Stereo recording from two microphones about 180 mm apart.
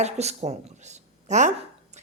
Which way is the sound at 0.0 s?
35° right (ahead or behind).